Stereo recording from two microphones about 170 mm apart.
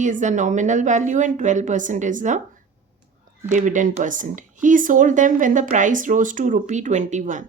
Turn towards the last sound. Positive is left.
turn(degrees=-45)  # may be behind; listen again after turning